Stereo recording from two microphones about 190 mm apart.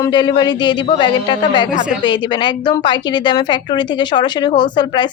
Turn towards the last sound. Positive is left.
turn(degrees=25)  # may be behind; listen again after turning